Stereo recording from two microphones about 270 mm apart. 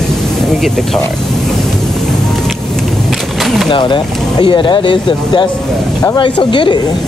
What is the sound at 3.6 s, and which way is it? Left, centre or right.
Speech, centre.